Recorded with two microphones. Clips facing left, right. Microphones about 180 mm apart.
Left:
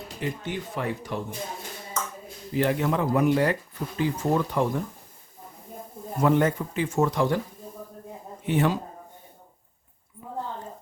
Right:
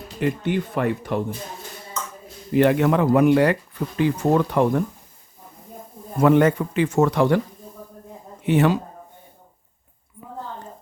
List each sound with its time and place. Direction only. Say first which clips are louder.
0.2 s speech: right 9 dB; 60° right (ahead or behind)
2.5 s speech: right 7 dB; 70° right (ahead or behind)
6.2 s speech: right 6 dB; 75° right (ahead or behind)
8.4 s speech: right 5 dB; 75° right (ahead or behind)